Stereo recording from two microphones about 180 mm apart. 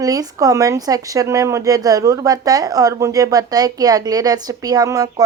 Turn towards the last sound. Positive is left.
turn(degrees=-20)  # may be behind; listen again after turning